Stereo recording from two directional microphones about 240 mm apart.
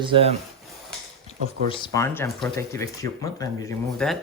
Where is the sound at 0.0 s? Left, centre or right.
Right.